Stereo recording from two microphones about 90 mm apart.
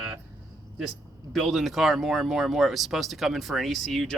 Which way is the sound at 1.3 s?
Centre (ahead or behind).